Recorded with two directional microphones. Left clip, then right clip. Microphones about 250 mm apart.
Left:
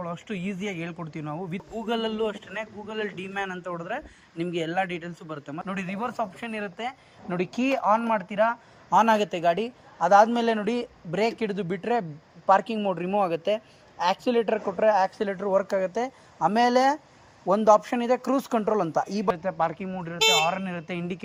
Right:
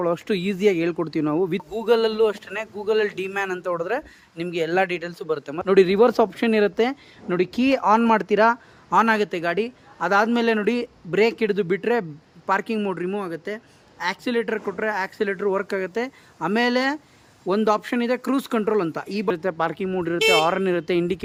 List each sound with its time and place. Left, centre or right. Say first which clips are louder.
0.0 s speech: right 11 dB; right
8.9 s a man's voice: right 2 dB; centre
19.0 s a man's voice: right 3 dB; centre
19.3 s speech: right 4 dB; centre